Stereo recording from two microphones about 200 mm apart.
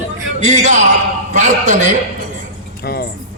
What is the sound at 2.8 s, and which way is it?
Music, 50° left (ahead or behind).